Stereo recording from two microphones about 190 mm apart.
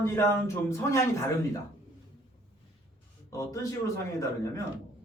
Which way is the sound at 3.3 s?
15° left (ahead or behind).